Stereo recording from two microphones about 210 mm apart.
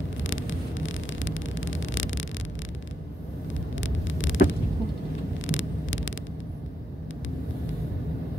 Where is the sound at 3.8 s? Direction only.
65° left (ahead or behind).